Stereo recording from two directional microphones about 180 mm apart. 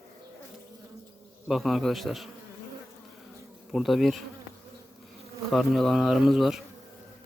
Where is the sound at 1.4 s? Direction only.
Centre (ahead or behind).